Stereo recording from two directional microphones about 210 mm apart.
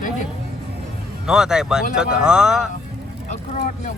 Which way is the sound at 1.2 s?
5° right (ahead or behind).